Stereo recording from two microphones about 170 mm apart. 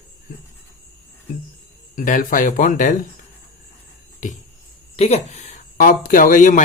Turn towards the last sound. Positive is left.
turn(degrees=50)  # may be behind; listen again after turning